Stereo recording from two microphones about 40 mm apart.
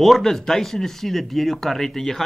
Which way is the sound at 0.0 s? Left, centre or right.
Centre.